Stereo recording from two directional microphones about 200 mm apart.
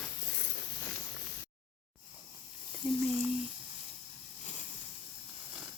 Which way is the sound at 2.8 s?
5° right (ahead or behind).